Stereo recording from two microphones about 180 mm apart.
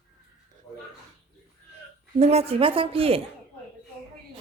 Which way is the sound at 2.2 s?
35° right (ahead or behind).